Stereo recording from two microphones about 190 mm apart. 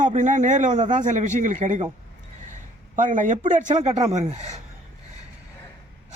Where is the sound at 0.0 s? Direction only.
40° right (ahead or behind).